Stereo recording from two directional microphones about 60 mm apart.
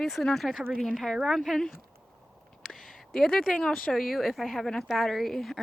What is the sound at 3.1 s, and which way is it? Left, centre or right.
Speech, centre.